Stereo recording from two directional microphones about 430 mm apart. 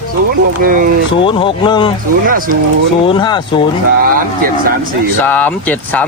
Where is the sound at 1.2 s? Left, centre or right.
Centre.